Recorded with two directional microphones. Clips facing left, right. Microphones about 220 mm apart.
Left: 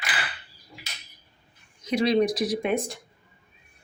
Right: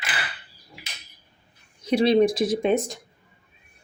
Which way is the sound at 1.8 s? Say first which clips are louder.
Right 4 dB; 30° right (ahead or behind).